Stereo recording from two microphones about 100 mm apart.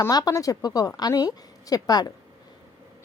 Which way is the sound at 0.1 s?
40° left (ahead or behind).